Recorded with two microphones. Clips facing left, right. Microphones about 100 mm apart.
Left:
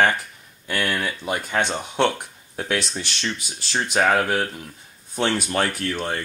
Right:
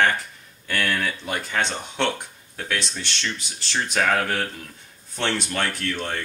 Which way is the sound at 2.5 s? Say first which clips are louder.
Left 3 dB; 30° left (ahead or behind).